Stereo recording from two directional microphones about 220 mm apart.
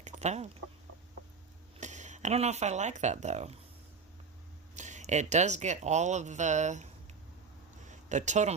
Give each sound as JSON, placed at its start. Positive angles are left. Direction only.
{"t": 0.0, "sound": "chicken", "side_deg": -30}
{"t": 1.8, "sound": "speech", "side_deg": -30}
{"t": 4.8, "sound": "speech", "side_deg": -35}
{"t": 7.9, "sound": "a sound", "side_deg": -35}